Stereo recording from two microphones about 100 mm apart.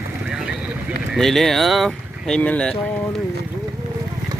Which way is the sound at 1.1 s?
5° left (ahead or behind).